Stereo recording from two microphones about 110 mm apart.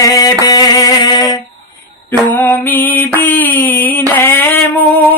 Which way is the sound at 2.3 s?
15° left (ahead or behind).